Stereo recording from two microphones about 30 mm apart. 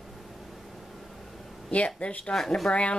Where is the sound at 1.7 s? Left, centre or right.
Left.